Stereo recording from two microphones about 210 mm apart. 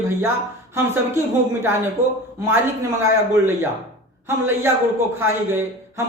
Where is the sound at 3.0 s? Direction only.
15° right (ahead or behind).